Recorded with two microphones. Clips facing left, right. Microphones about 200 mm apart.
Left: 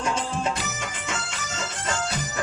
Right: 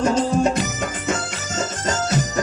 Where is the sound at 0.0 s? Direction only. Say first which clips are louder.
Right 9 dB; 40° right (ahead or behind).